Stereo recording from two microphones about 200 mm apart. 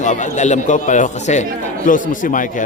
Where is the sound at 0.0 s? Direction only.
35° left (ahead or behind).